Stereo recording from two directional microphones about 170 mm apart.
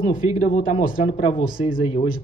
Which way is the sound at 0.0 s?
55° left (ahead or behind).